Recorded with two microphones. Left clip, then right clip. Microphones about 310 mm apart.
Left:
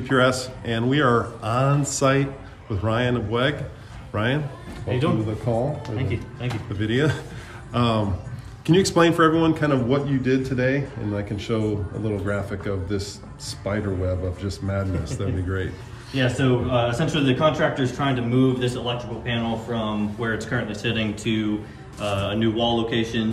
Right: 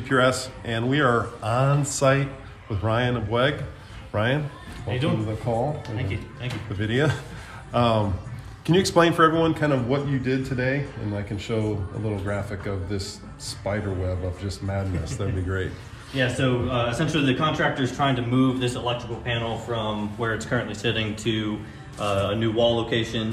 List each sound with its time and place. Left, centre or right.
0.0 s a man's voice: centre
4.8 s a man's voice: centre
5.5 s a man's voice: centre
5.9 s speech: centre
6.7 s a man's voice: centre
16.2 s a man's voice: centre
22.0 s speech: centre